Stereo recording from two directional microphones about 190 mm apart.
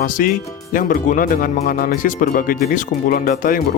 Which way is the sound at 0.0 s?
45° left (ahead or behind).